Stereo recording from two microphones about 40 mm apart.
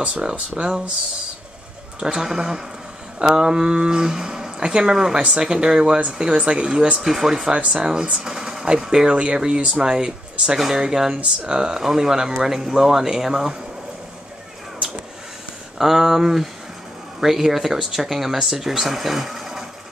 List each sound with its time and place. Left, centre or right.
0.0 s speech: right
2.1 s speech: centre
5.1 s speech: right
5.4 s speech: centre
7.0 s speech: centre
7.5 s speech: right
7.8 s speech: centre
15.8 s speech: centre